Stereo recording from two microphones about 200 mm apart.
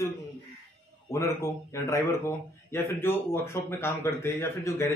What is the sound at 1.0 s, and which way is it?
Speech, 15° left (ahead or behind).